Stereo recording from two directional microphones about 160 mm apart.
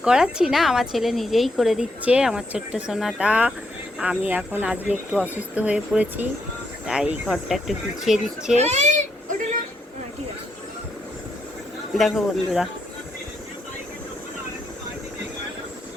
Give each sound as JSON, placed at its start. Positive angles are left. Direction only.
{"t": 0.0, "sound": "a woman's voice", "side_deg": -5}
{"t": 8.5, "sound": "a child's voice", "side_deg": -45}
{"t": 11.9, "sound": "a woman's voice", "side_deg": 0}